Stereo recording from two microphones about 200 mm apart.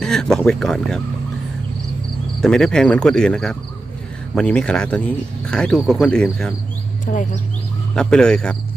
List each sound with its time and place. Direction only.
0.0 s speech: 5° left (ahead or behind)
2.4 s speech: 5° left (ahead or behind)
7.0 s speech: 40° left (ahead or behind)
7.9 s speech: 5° left (ahead or behind)